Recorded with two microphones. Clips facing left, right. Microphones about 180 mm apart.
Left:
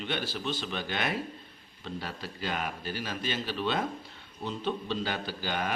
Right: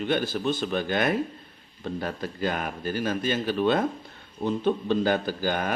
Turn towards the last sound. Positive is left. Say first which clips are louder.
# right 6 dB
turn(degrees=-45)  # may be behind; listen again after turning